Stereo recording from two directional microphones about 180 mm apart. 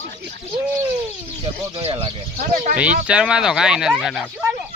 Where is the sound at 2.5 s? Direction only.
45° right (ahead or behind).